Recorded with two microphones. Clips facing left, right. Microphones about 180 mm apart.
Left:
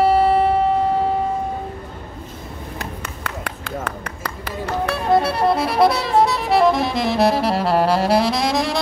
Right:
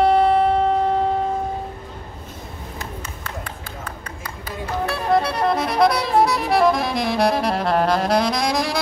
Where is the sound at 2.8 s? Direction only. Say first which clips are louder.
Left 1 dB; 70° left (ahead or behind).